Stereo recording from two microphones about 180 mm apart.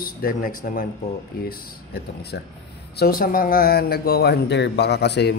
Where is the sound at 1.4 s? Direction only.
65° left (ahead or behind).